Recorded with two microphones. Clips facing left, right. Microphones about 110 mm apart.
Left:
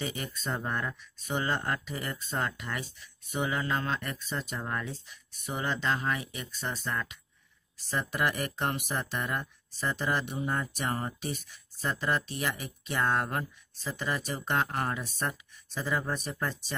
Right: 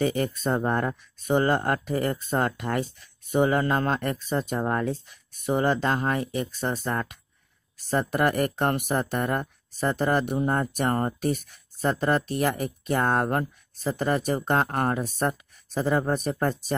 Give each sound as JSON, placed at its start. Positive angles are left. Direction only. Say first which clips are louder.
{"t": 0.0, "sound": "speech", "louder": "right 11 dB", "side_deg": -50}